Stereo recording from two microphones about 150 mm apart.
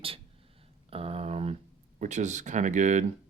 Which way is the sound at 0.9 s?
40° right (ahead or behind).